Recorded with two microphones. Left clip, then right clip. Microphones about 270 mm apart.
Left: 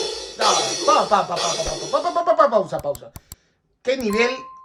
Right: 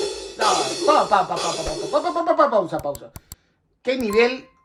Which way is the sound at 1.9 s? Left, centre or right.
Left.